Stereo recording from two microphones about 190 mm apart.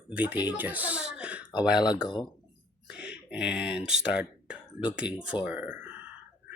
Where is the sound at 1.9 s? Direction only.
25° left (ahead or behind).